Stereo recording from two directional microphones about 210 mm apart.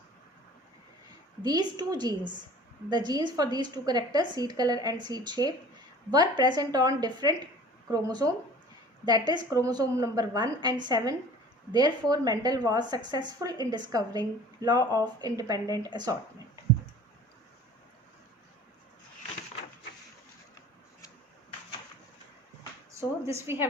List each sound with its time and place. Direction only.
1.4 s a woman's voice: 20° right (ahead or behind)
23.0 s a woman's voice: 10° right (ahead or behind)